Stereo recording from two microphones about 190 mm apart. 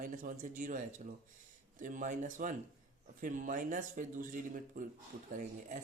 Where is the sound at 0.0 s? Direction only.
45° right (ahead or behind).